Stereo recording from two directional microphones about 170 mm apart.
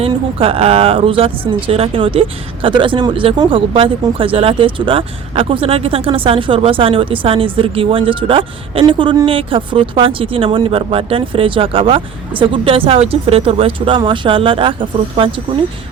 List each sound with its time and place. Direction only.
0.0 s speech: 35° right (ahead or behind)